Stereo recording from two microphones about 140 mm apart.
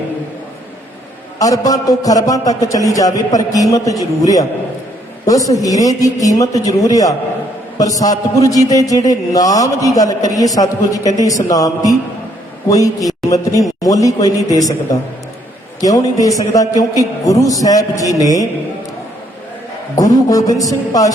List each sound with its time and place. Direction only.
1.4 s a man's voice: 25° left (ahead or behind)
5.5 s a man's voice: 25° left (ahead or behind)
15.8 s a man's voice: 25° left (ahead or behind)
20.0 s a man's voice: 25° left (ahead or behind)